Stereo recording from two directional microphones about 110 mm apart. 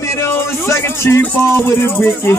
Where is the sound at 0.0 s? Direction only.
25° left (ahead or behind).